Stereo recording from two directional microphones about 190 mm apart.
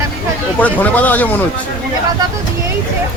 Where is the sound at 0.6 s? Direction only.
10° left (ahead or behind).